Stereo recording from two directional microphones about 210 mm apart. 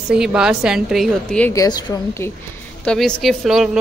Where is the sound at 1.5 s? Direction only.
20° left (ahead or behind).